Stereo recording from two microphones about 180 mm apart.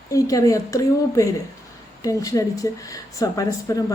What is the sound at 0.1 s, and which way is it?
Speech, 20° left (ahead or behind).